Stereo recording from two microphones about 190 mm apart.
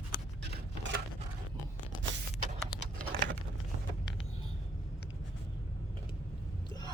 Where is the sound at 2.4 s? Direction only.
40° right (ahead or behind).